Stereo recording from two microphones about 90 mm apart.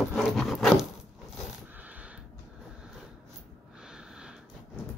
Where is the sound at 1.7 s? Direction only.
15° right (ahead or behind).